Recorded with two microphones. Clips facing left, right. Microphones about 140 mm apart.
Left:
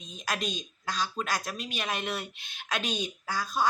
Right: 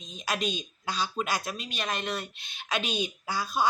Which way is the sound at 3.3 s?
10° right (ahead or behind).